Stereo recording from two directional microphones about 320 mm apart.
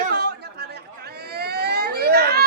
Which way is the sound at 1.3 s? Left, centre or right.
Right.